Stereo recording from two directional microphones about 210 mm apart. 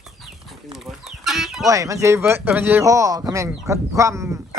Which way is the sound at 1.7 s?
15° right (ahead or behind).